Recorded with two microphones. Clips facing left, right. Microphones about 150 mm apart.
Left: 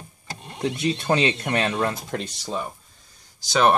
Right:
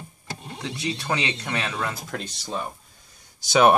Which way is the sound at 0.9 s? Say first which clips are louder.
Left 6 dB; 20° left (ahead or behind).